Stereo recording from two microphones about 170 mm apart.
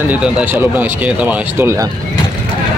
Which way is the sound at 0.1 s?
5° right (ahead or behind).